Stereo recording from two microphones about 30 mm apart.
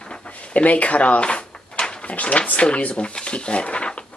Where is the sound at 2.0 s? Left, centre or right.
Left.